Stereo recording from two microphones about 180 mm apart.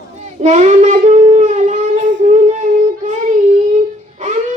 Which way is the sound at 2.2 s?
45° right (ahead or behind).